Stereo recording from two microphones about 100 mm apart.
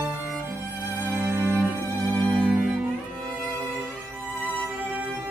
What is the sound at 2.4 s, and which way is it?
Music, 15° right (ahead or behind).